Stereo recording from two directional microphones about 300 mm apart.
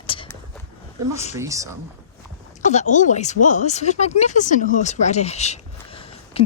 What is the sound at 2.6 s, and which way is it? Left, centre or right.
Speech, left.